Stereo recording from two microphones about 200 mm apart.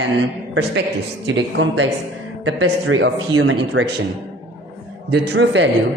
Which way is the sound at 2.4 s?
75° right (ahead or behind).